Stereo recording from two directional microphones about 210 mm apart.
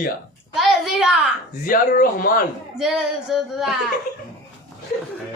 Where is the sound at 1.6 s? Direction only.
40° left (ahead or behind).